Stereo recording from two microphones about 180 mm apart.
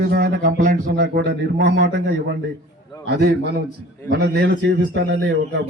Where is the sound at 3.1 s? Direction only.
65° right (ahead or behind).